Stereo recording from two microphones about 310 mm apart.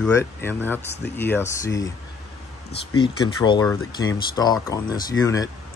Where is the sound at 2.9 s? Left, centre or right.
Centre.